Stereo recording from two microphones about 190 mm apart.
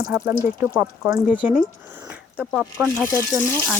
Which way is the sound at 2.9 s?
15° left (ahead or behind).